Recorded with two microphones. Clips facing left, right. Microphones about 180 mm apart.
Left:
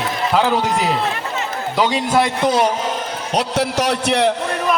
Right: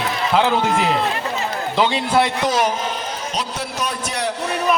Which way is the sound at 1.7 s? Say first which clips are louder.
Left 1 dB; 10° left (ahead or behind).